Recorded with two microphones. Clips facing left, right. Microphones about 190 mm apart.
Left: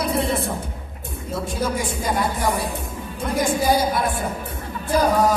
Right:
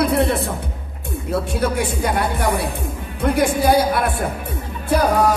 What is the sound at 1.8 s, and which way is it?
Speech, 65° right (ahead or behind).